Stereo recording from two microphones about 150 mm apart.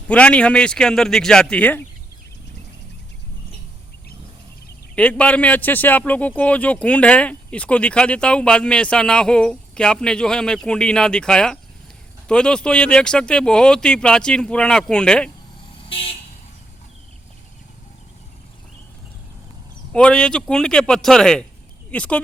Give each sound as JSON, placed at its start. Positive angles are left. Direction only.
{"t": 0.1, "sound": "speech", "side_deg": 10}
{"t": 4.9, "sound": "speech", "side_deg": 10}
{"t": 15.9, "sound": "vehicle", "side_deg": 40}
{"t": 19.9, "sound": "speech", "side_deg": 5}